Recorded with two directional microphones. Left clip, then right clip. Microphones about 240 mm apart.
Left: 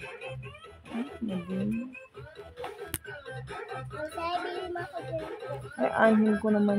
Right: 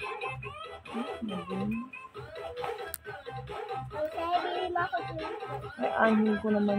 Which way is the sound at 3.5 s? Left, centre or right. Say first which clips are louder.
Right 3 dB; left.